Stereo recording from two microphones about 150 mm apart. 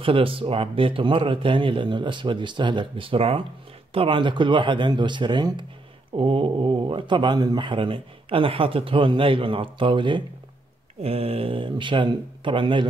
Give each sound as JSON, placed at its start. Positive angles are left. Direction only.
{"t": 0.0, "sound": "speech", "side_deg": -35}